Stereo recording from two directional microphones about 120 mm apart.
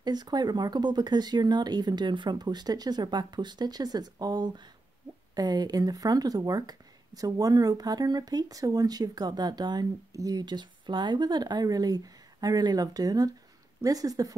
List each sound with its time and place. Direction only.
0.0 s speech: 35° right (ahead or behind)